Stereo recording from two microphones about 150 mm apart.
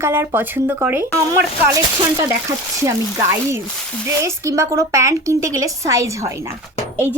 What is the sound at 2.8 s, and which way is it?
A woman's voice, 20° right (ahead or behind).